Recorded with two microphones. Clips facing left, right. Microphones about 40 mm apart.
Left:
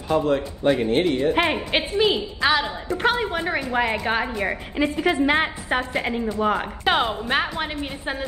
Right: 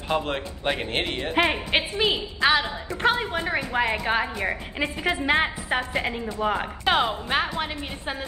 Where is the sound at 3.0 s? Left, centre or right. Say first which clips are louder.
Left 1 dB; centre.